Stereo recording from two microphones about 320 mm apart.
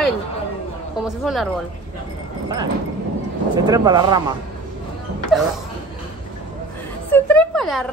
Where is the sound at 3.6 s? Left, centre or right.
Centre.